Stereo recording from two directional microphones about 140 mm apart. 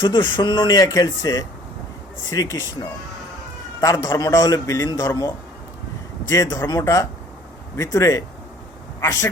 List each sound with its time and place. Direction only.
0.0 s a man's voice: 30° left (ahead or behind)
3.8 s a man's voice: 25° left (ahead or behind)